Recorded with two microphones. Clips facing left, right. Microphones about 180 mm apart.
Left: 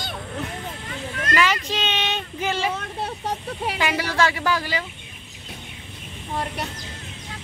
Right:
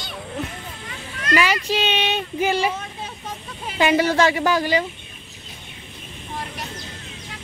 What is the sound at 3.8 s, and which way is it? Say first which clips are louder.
A woman's voice: right 7 dB; 25° right (ahead or behind).